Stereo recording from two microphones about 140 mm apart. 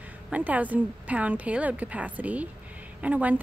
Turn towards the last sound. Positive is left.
turn(degrees=-10)  # may be behind; listen again after turning